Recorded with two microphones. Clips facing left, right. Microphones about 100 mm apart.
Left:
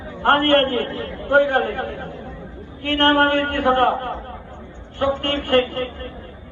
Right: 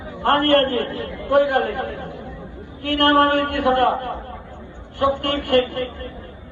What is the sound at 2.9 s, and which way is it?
A man's voice, 20° right (ahead or behind).